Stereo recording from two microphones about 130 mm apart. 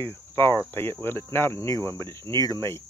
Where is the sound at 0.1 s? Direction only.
20° left (ahead or behind).